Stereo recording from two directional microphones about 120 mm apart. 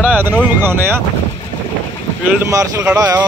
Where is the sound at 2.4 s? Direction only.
25° right (ahead or behind).